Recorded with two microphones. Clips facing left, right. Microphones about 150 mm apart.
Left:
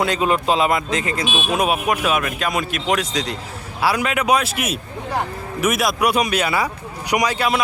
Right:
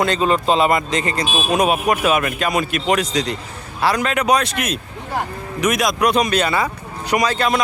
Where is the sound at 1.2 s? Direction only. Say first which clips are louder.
Right 1 dB; 35° right (ahead or behind).